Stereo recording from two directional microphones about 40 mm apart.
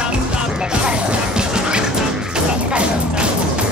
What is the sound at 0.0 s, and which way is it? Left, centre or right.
Music, right.